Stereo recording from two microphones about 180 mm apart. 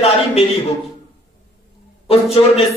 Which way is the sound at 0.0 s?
35° left (ahead or behind).